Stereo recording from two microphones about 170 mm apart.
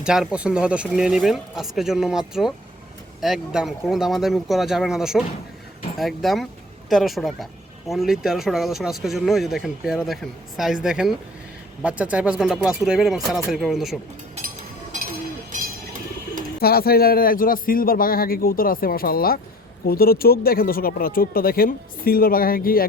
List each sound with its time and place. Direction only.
0.0 s speech: 5° right (ahead or behind)
16.6 s speech: 65° left (ahead or behind)